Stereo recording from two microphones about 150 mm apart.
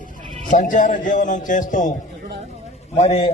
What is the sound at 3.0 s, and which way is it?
Speech, 45° left (ahead or behind).